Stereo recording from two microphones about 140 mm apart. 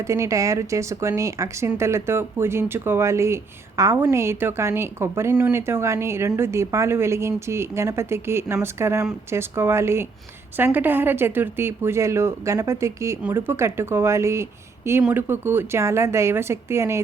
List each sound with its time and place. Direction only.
0.0 s speech: 20° right (ahead or behind)